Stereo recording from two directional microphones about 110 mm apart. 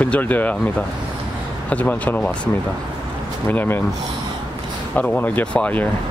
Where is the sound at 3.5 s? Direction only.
20° left (ahead or behind).